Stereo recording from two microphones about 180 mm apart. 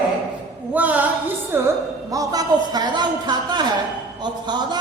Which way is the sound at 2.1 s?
20° right (ahead or behind).